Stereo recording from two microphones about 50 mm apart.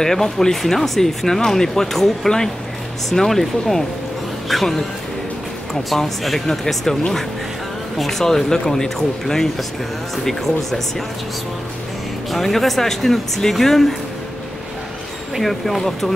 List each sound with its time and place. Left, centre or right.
0.0 s speech: centre
5.9 s speech: centre
12.3 s speech: centre
15.3 s speech: centre